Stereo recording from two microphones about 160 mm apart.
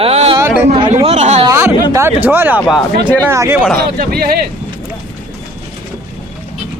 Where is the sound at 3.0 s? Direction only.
10° left (ahead or behind).